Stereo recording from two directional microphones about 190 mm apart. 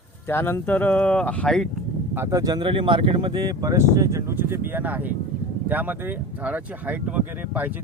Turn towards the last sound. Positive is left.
turn(degrees=-10)  # may be behind; listen again after turning